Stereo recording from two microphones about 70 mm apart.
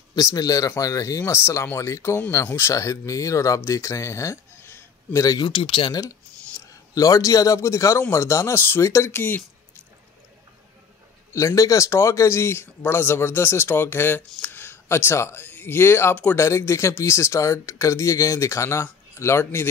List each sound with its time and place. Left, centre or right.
0.1 s speech: left
1.3 s speech: left
5.4 s speech: left
6.9 s speech: left
8.5 s speech: left
8.8 s speech: left
9.1 s speech: left
11.3 s speech: left